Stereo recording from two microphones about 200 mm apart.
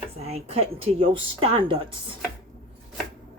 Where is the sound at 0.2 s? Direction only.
30° right (ahead or behind).